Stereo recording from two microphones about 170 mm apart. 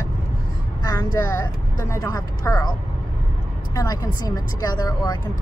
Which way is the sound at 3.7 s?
20° left (ahead or behind).